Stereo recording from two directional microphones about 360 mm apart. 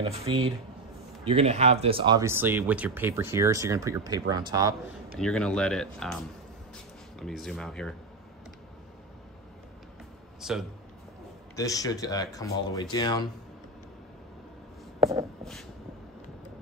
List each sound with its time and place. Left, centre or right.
0.0 s speech: centre
5.2 s speech: centre
10.4 s speech: centre
11.5 s speech: centre